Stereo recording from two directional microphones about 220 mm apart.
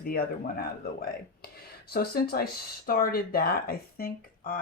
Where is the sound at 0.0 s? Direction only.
45° left (ahead or behind).